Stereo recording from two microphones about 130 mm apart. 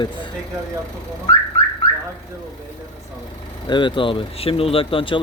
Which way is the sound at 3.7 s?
40° left (ahead or behind).